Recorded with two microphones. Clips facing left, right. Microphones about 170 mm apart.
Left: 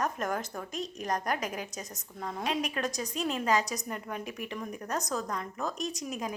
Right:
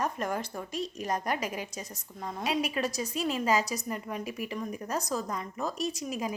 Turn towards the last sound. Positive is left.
turn(degrees=0)  # may be behind; listen again after turning